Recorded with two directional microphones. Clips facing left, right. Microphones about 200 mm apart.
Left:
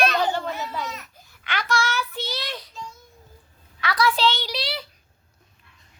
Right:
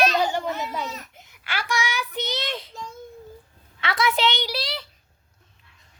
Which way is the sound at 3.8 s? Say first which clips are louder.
Left 1 dB; 25° right (ahead or behind).